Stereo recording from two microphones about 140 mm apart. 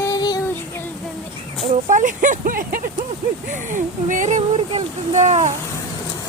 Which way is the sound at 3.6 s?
65° right (ahead or behind).